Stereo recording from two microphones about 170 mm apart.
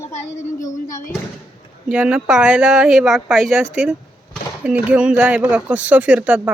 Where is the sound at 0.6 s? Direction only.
50° left (ahead or behind).